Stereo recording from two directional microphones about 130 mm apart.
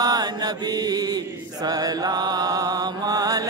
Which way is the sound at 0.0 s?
30° right (ahead or behind).